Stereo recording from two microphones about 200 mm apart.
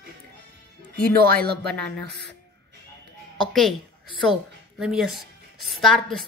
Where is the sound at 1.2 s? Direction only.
50° right (ahead or behind).